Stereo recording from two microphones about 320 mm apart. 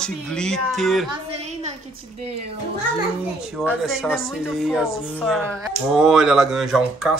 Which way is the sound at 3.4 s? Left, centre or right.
Centre.